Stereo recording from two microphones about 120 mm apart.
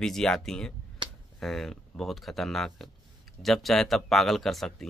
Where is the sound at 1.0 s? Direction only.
40° right (ahead or behind).